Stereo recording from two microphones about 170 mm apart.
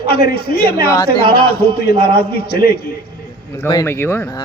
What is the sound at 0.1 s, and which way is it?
A man's voice, 65° left (ahead or behind).